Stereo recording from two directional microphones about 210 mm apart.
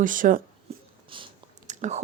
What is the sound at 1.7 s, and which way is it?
Whispering, 35° right (ahead or behind).